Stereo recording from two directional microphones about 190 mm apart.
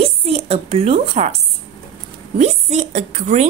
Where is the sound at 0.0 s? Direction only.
30° right (ahead or behind).